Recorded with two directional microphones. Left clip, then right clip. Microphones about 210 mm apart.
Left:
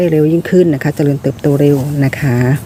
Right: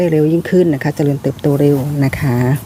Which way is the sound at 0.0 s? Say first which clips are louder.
Left 2 dB; centre (ahead or behind).